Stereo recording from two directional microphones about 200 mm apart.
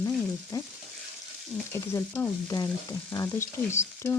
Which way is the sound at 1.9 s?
15° left (ahead or behind).